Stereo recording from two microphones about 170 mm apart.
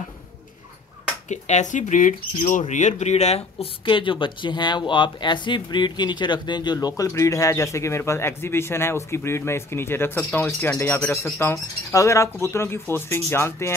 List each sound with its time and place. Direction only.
1.3 s speech: 45° left (ahead or behind); by 13.7 s 15° left (ahead or behind)